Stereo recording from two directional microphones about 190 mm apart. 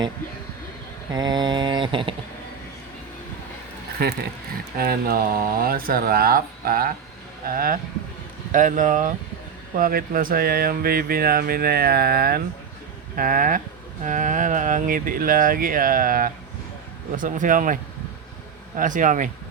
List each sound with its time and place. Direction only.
1.1 s mantra: 20° right (ahead or behind)
4.0 s speech: 55° right (ahead or behind)
18.8 s speech: 45° right (ahead or behind)